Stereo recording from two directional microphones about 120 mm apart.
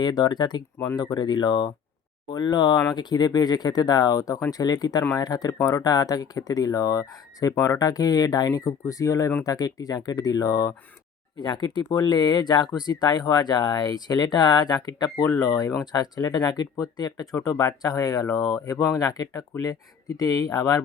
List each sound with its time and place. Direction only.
0.0 s speech: 35° left (ahead or behind)